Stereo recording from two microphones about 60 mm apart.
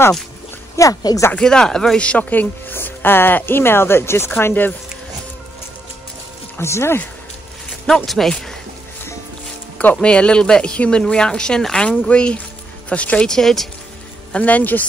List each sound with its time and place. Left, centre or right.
0.7 s speech: left
1.4 s speech: centre
2.7 s speech: left
6.6 s speech: left
7.8 s speech: centre
9.9 s a man's voice: centre
13.4 s speech: centre
14.3 s a man's voice: left